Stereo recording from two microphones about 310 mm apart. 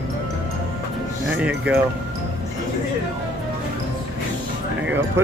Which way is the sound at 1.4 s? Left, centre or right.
Centre.